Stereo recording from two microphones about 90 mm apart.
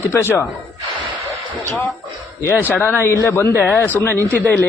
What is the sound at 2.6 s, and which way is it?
Speech, 20° left (ahead or behind).